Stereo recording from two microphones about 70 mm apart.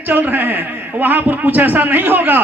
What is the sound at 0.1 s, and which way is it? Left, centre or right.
A man's voice, right.